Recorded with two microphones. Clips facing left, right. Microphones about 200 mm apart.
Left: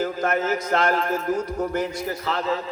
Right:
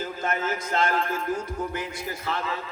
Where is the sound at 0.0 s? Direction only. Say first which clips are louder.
Left 5 dB; 50° left (ahead or behind).